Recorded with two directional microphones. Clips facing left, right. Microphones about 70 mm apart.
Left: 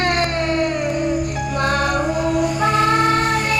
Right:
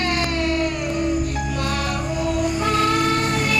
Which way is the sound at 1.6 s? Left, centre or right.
Left.